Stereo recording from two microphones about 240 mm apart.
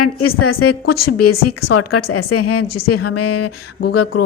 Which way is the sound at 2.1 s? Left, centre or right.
Left.